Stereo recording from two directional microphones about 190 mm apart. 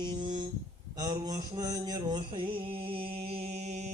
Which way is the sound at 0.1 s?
25° right (ahead or behind).